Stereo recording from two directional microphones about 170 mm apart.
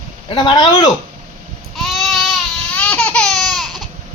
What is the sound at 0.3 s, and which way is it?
Speech, 25° left (ahead or behind).